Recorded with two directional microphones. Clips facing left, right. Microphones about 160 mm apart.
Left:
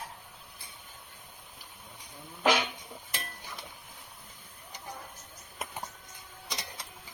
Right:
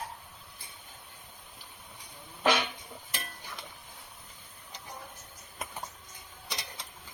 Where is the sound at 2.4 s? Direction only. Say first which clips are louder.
Left 1 dB; 10° left (ahead or behind).